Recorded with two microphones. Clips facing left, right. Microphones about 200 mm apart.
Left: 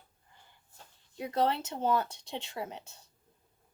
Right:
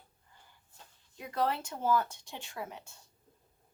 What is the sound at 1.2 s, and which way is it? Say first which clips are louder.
Speech: left 3 dB; 30° left (ahead or behind).